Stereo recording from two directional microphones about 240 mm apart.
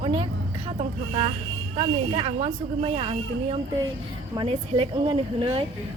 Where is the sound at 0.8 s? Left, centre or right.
Right.